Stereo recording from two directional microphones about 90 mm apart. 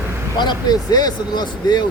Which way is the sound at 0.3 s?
50° left (ahead or behind).